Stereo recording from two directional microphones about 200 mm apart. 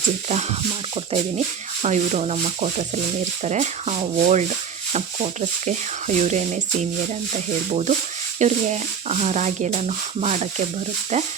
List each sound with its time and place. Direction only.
1.8 s speech: 35° right (ahead or behind)
7.7 s speech: 35° right (ahead or behind)